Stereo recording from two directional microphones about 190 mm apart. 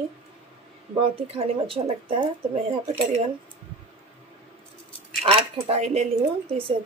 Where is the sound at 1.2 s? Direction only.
30° right (ahead or behind).